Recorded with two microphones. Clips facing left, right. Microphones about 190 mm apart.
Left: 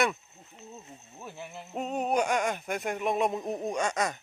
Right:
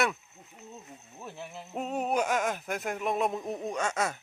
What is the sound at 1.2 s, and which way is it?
Speech, centre (ahead or behind).